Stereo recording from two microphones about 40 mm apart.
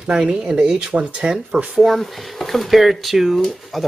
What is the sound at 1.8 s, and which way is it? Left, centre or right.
Speech, centre.